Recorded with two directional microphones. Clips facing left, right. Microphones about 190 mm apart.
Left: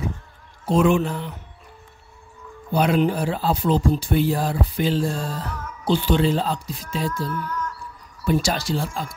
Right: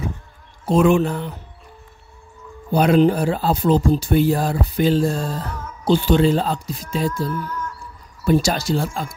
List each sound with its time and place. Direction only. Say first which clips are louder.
0.7 s speech: right 3 dB; 50° right (ahead or behind)
2.7 s speech: right 5 dB; 45° right (ahead or behind)
8.3 s speech: right 4 dB; 45° right (ahead or behind)